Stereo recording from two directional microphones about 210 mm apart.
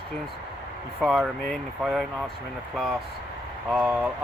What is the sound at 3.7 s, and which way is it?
Speech, 5° right (ahead or behind).